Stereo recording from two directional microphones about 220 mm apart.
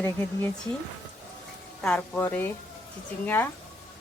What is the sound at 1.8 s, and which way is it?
Speech, 5° left (ahead or behind).